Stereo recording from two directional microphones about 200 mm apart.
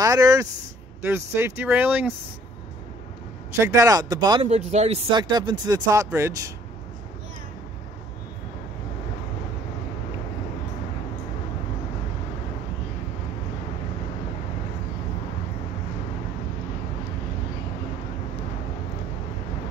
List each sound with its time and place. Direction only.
0.0 s speech: 15° right (ahead or behind)
3.5 s speech: 15° right (ahead or behind)
4.5 s speech: 35° right (ahead or behind)
5.1 s speech: 20° right (ahead or behind)